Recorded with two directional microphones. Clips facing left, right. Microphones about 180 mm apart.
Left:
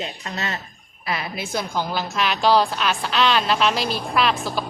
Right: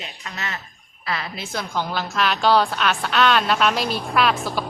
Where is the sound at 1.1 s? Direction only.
15° left (ahead or behind).